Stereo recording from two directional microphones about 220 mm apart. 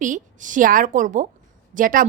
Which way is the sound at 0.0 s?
35° right (ahead or behind).